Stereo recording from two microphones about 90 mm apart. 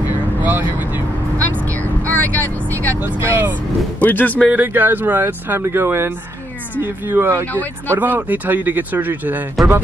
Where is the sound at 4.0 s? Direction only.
20° left (ahead or behind).